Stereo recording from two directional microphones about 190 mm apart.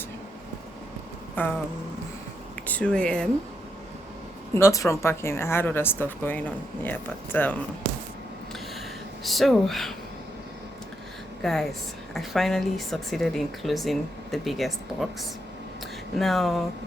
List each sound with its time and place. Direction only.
1.4 s speech: 10° left (ahead or behind)
2.6 s speech: 5° left (ahead or behind)
4.5 s speech: 15° left (ahead or behind)
9.2 s speech: centre (ahead or behind)
11.4 s speech: centre (ahead or behind)